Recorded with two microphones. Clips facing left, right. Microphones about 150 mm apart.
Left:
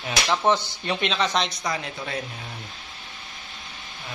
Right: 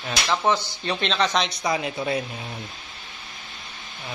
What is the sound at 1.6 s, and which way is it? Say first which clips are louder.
Speech: right 5 dB; 15° right (ahead or behind).